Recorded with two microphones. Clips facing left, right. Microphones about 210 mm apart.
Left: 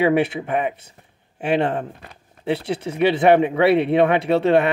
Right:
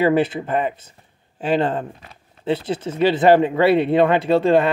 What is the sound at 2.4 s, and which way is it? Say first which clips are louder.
Speech: right 1 dB; 70° left (ahead or behind).